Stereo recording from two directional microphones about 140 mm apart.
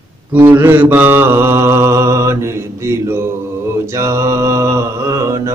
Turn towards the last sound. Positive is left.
turn(degrees=-20)  # may be behind; listen again after turning